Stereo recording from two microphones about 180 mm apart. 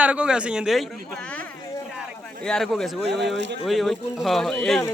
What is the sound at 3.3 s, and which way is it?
Speech, 80° right.